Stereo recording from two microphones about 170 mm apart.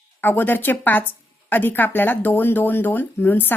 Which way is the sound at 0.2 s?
10° left (ahead or behind).